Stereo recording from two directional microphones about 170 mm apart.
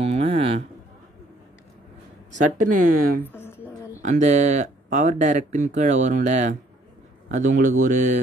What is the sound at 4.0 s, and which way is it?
Speech, 45° right (ahead or behind).